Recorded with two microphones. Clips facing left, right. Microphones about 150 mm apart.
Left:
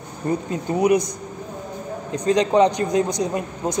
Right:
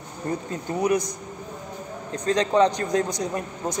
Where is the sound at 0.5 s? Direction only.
15° left (ahead or behind).